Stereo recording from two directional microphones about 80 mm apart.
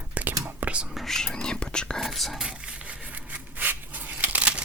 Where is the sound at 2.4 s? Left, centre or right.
Centre.